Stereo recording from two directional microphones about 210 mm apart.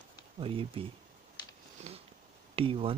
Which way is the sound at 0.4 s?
25° right (ahead or behind).